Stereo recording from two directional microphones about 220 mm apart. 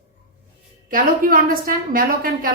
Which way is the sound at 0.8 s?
40° right (ahead or behind).